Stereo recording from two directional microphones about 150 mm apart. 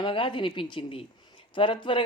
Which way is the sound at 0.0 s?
35° left (ahead or behind).